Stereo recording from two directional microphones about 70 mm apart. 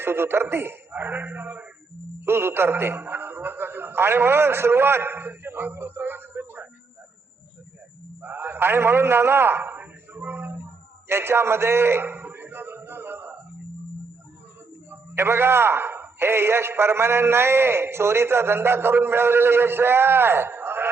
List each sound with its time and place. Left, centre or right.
0.0 s a man's voice: right
2.2 s a man's voice: right
8.2 s a sound: right
14.8 s a man's voice: right